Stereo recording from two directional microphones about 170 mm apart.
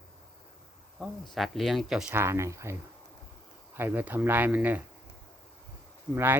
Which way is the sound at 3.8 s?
10° right (ahead or behind).